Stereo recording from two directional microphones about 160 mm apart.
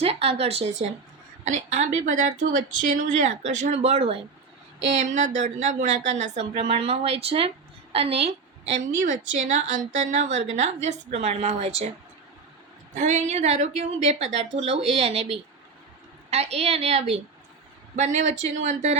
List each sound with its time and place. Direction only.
0.0 s a woman's voice: 40° right (ahead or behind)
5.1 s a woman's voice: 50° right (ahead or behind)
8.8 s a woman's voice: 50° right (ahead or behind)
12.9 s a woman's voice: 50° right (ahead or behind)